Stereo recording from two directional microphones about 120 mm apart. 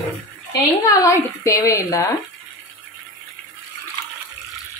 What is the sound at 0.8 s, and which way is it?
A woman's voice, 25° left (ahead or behind).